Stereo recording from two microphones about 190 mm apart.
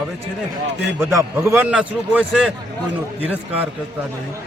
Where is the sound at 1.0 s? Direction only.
15° right (ahead or behind).